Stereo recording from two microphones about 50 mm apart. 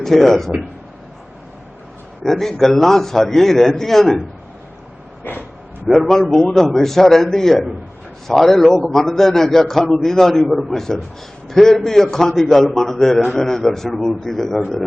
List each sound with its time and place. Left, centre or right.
0.0 s a man's voice: centre
2.2 s a man's voice: centre
5.2 s speech: left
5.9 s a man's voice: centre